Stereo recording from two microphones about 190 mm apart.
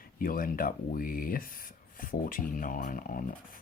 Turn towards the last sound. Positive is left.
turn(degrees=45)  # may be behind; listen again after turning